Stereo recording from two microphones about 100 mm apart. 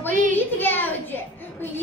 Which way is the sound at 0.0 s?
20° left (ahead or behind).